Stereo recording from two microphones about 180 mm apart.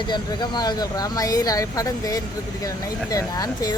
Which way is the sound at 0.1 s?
25° left (ahead or behind).